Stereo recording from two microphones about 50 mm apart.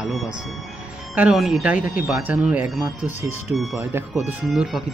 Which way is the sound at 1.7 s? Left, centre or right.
Right.